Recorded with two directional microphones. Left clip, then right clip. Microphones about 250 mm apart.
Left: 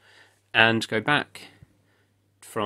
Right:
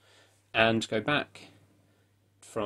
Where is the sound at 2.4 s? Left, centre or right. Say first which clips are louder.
Left 5 dB; left.